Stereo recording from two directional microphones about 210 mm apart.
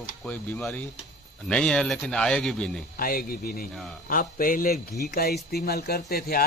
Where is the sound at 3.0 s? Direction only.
45° left (ahead or behind).